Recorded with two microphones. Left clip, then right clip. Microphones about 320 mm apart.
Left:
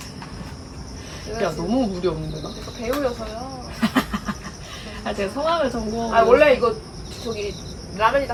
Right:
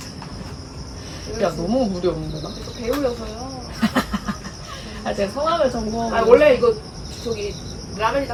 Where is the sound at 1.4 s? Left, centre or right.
Centre.